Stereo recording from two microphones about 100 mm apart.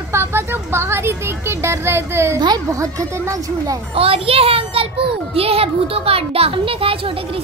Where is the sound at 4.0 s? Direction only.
75° right (ahead or behind).